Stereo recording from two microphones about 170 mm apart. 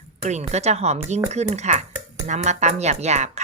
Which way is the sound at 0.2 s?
45° right (ahead or behind).